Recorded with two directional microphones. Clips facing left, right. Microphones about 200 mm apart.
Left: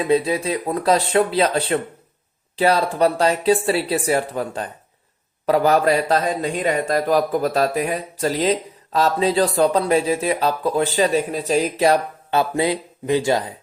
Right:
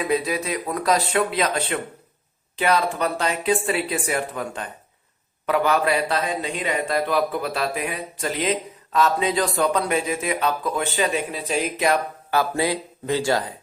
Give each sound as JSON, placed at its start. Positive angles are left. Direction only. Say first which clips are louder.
{"t": 0.0, "sound": "a man's voice", "louder": "left 5 dB", "side_deg": 30}
{"t": 12.3, "sound": "speech", "louder": "left 3 dB", "side_deg": 20}